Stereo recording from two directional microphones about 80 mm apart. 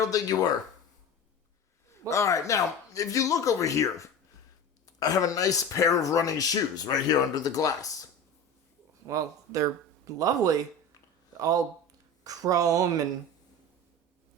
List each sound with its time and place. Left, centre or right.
0.0 s speech: left
1.9 s speech: left
9.0 s speech: right